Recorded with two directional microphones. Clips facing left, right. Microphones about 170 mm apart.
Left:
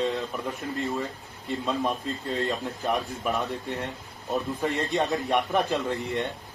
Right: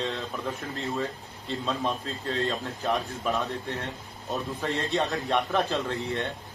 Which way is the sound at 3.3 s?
15° left (ahead or behind).